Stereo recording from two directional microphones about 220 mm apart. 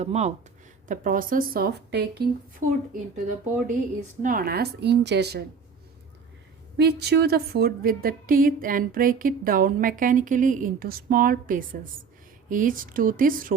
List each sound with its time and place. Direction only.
0.0 s a woman's voice: 30° right (ahead or behind); by 5.4 s 50° right (ahead or behind)
6.7 s a woman's voice: 45° right (ahead or behind)